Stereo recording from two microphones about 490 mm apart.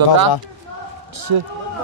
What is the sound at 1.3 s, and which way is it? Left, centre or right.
Speech, right.